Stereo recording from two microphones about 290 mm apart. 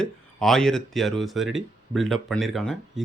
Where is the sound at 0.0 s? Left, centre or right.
Centre.